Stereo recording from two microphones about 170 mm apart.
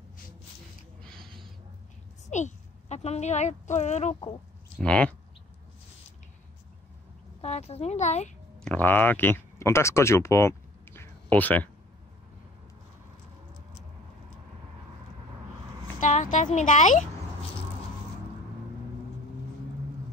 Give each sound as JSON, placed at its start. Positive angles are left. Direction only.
{"t": 1.0, "sound": "a sound", "side_deg": 5}
{"t": 2.3, "sound": "a woman's voice", "side_deg": 40}
{"t": 4.7, "sound": "speech", "side_deg": 5}
{"t": 7.4, "sound": "speech", "side_deg": 40}
{"t": 8.6, "sound": "speech", "side_deg": 10}
{"t": 16.0, "sound": "a sound", "side_deg": 45}
{"t": 16.5, "sound": "a woman's voice", "side_deg": 45}